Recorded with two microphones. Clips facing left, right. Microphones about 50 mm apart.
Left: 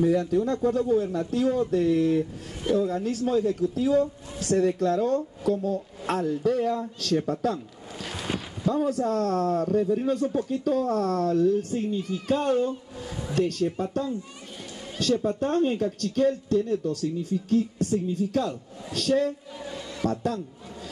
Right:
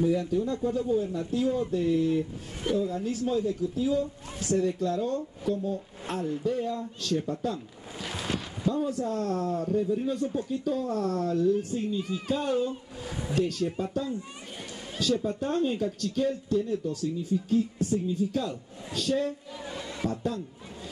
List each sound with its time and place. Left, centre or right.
0.0 s a man's voice: left
8.0 s a sound: centre
8.6 s a man's voice: left
15.2 s a man's voice: left
19.6 s a sound: centre
20.1 s a man's voice: left